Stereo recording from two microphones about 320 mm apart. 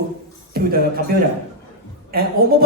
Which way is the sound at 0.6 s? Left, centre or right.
Right.